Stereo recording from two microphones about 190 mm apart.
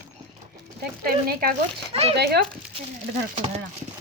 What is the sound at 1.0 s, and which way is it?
Speech, 50° right (ahead or behind).